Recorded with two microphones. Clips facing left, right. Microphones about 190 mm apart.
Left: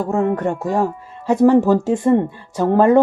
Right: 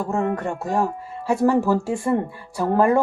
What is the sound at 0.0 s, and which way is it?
Speech, 20° left (ahead or behind).